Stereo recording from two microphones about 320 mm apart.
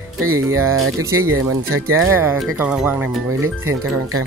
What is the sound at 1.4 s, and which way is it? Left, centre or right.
Speech, right.